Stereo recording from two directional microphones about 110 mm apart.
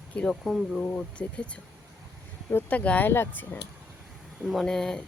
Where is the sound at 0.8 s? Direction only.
10° left (ahead or behind).